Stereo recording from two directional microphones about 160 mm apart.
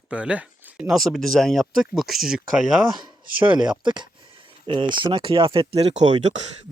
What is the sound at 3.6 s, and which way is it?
A man's voice, 30° right (ahead or behind).